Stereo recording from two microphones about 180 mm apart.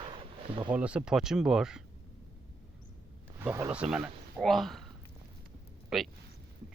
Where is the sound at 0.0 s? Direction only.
30° right (ahead or behind).